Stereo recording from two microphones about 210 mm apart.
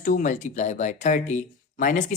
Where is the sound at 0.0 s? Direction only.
40° left (ahead or behind).